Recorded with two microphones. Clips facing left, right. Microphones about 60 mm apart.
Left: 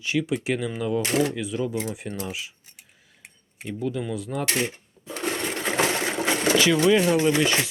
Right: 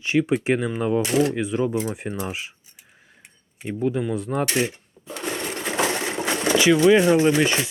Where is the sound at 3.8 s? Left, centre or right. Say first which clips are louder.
Right 5 dB; right.